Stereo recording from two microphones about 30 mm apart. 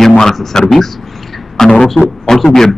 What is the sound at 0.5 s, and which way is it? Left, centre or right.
A man's voice, centre.